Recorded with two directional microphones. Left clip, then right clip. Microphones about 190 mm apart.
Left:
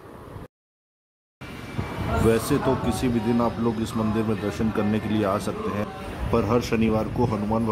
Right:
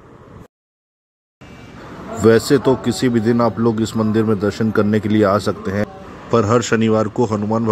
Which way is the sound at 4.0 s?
15° right (ahead or behind).